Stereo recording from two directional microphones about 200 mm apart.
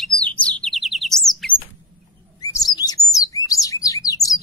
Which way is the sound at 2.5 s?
20° left (ahead or behind).